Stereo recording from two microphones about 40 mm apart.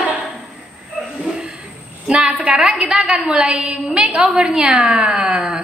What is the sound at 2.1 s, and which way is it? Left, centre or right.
A woman's voice, right.